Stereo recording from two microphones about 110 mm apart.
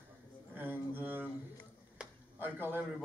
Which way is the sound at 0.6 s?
15° right (ahead or behind).